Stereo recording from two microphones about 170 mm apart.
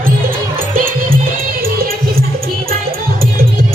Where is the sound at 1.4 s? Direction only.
60° right (ahead or behind).